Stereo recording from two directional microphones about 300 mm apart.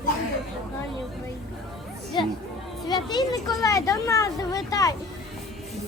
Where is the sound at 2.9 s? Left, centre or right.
Centre.